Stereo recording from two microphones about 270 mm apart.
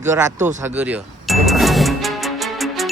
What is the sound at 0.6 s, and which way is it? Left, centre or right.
Music, centre.